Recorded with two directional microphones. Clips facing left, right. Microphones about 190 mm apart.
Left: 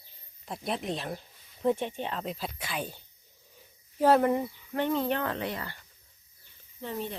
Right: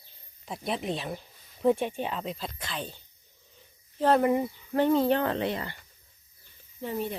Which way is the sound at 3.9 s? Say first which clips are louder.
Left 1 dB; 5° left (ahead or behind).